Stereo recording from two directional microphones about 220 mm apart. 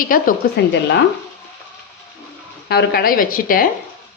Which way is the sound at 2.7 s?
45° left (ahead or behind).